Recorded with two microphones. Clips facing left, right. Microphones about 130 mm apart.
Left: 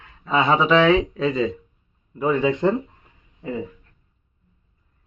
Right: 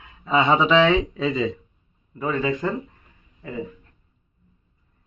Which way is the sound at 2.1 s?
15° left (ahead or behind).